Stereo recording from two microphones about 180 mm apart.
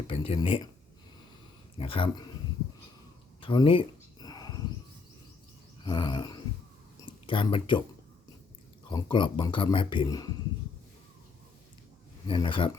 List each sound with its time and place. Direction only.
0.1 s speech: 30° left (ahead or behind)
1.8 s speech: 30° left (ahead or behind)
3.4 s a sound: 25° left (ahead or behind)
5.8 s a sound: 25° left (ahead or behind)
8.9 s speech: 25° left (ahead or behind)
12.3 s speech: 25° left (ahead or behind)